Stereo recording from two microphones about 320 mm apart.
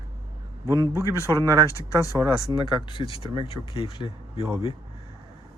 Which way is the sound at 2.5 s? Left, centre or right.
Centre.